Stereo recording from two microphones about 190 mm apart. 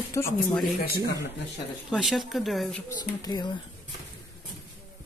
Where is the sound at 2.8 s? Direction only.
20° left (ahead or behind).